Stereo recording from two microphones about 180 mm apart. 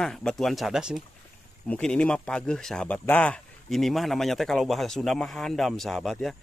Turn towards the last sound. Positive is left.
turn(degrees=0)  # may be behind; listen again after turning